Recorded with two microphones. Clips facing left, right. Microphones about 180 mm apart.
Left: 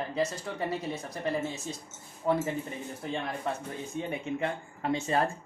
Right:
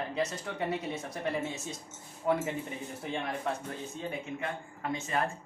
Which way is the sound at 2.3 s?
5° right (ahead or behind).